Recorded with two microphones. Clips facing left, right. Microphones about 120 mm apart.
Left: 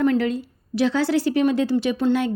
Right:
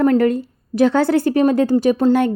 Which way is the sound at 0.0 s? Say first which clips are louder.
Right 5 dB; 45° right (ahead or behind).